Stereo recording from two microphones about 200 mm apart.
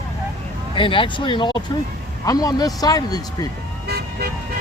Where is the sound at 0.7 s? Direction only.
25° left (ahead or behind).